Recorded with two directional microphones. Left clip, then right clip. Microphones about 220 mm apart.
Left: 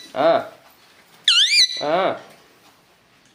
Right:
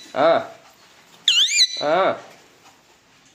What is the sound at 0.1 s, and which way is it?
Speech, 10° right (ahead or behind).